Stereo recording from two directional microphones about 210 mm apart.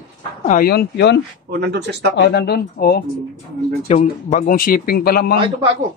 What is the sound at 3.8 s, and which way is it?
Speech, 35° left (ahead or behind).